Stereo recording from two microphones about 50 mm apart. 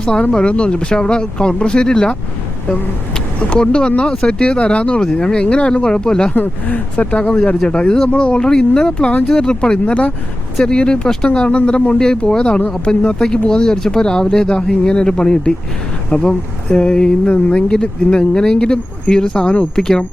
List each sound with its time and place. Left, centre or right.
0.0 s speech: centre
3.5 s speech: left
6.7 s speech: left